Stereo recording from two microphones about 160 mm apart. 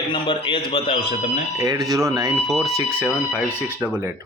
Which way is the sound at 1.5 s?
20° right (ahead or behind).